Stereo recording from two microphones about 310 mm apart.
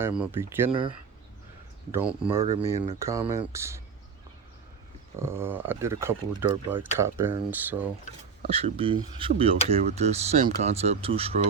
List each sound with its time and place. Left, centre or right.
0.0 s speech: centre
5.2 s speech: centre
8.4 s speech: centre